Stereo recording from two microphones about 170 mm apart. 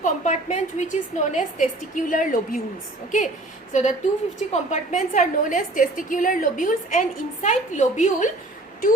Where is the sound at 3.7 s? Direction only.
45° left (ahead or behind).